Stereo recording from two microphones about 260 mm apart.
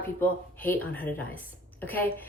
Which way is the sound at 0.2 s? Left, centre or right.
Centre.